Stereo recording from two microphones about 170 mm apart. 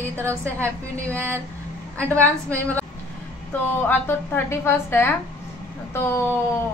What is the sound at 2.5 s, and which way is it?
Speech, 10° left (ahead or behind).